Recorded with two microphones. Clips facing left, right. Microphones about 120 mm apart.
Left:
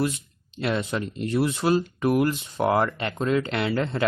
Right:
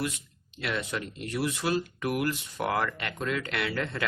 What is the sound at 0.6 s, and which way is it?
Speech, 30° left (ahead or behind).